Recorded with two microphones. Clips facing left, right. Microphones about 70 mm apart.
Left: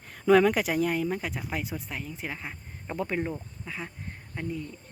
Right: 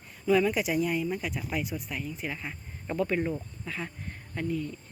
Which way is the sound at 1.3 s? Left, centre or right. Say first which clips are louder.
Right 1 dB; left.